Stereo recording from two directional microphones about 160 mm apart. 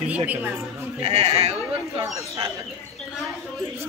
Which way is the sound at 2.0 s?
20° right (ahead or behind).